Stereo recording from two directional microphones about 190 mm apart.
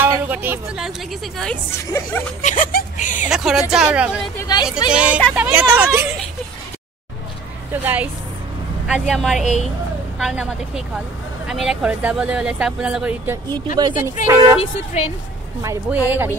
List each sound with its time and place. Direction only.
0.0 s a woman's voice: 10° right (ahead or behind)
1.9 s speech: 15° left (ahead or behind)
2.4 s speech: 45° left (ahead or behind)
3.3 s speech: 5° right (ahead or behind)
4.4 s speech: 20° left (ahead or behind)
4.9 s speech: 5° right (ahead or behind)
7.7 s speech: 10° right (ahead or behind)
9.4 s speech: 40° left (ahead or behind)
10.1 s speech: 5° right (ahead or behind)
13.7 s speech: 20° right (ahead or behind)
14.6 s speech: 35° left (ahead or behind)
15.6 s speech: 15° right (ahead or behind)